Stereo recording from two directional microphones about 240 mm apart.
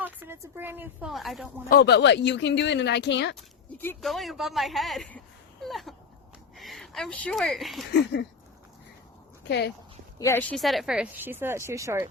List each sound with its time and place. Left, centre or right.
0.0 s a woman's voice: centre
1.7 s speech: left
3.3 s speech: centre
9.4 s speech: left
10.2 s speech: centre